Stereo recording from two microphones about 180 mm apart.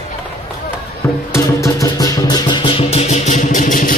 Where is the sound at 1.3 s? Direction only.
15° left (ahead or behind).